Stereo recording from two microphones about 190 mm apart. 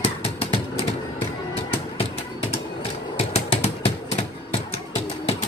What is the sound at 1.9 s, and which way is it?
Music, 30° left (ahead or behind).